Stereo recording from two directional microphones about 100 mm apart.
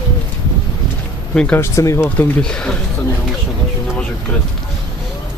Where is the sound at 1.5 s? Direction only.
30° left (ahead or behind).